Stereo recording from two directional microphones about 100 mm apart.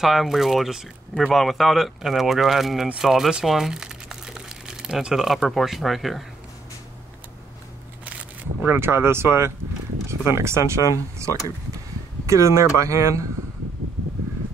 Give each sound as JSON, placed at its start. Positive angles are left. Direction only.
{"t": 0.0, "sound": "speech", "side_deg": 0}
{"t": 8.6, "sound": "speech", "side_deg": -25}